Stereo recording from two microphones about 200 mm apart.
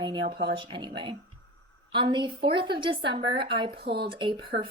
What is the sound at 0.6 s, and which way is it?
Speech, 25° right (ahead or behind).